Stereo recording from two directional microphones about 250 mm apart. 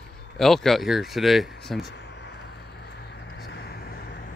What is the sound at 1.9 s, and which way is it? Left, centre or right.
Vehicle, left.